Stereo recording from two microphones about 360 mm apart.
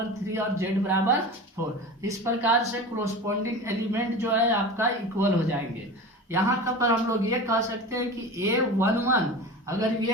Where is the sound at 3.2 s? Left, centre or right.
Centre.